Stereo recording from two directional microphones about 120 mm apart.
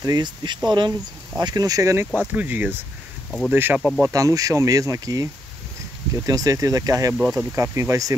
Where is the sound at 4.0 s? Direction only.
30° right (ahead or behind).